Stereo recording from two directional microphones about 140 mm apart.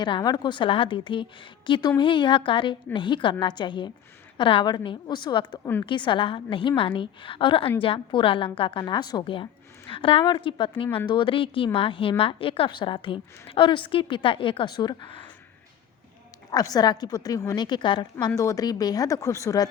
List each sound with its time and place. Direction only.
0.0 s a woman's voice: 30° left (ahead or behind)
5.5 s a woman's voice: 15° left (ahead or behind)
5.8 s a woman's voice: 35° left (ahead or behind)
16.5 s a woman's voice: 30° left (ahead or behind)